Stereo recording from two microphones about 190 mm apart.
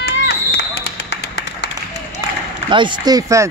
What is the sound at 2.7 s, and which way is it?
Speech, 25° right (ahead or behind).